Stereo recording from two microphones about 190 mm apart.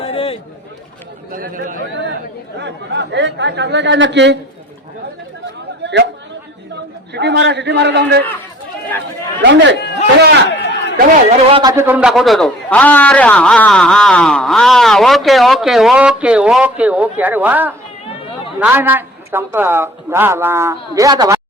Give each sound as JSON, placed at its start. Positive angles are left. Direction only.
{"t": 0.0, "sound": "a sound", "side_deg": 30}
{"t": 1.3, "sound": "speech", "side_deg": -45}
{"t": 2.6, "sound": "speech", "side_deg": -65}
{"t": 5.8, "sound": "chatter", "side_deg": -65}
{"t": 6.7, "sound": "a man's voice", "side_deg": -65}
{"t": 9.4, "sound": "speech", "side_deg": -70}
{"t": 9.7, "sound": "speech", "side_deg": 60}
{"t": 10.5, "sound": "a sound", "side_deg": 65}
{"t": 11.3, "sound": "speech", "side_deg": -30}
{"t": 11.7, "sound": "a man's voice", "side_deg": -10}